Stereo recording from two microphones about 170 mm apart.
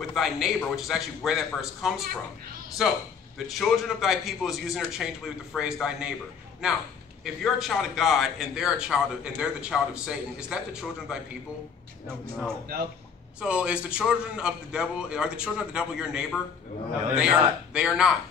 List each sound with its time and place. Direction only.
0.1 s a man's voice: centre (ahead or behind)
7.5 s a man's voice: centre (ahead or behind)